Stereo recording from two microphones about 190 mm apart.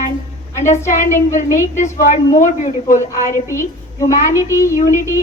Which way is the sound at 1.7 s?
40° left (ahead or behind).